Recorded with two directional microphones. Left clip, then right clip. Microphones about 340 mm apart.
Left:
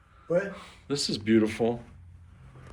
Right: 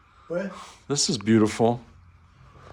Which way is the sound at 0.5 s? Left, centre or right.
Centre.